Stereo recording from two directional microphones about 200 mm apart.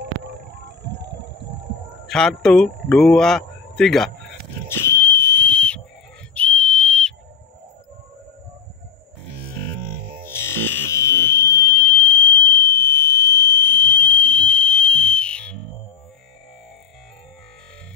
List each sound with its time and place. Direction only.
0.0 s vehicle: 60° right (ahead or behind)
2.0 s a man's voice: 5° left (ahead or behind)
4.6 s whistle: 10° left (ahead or behind)
10.2 s fire alarm: 10° left (ahead or behind)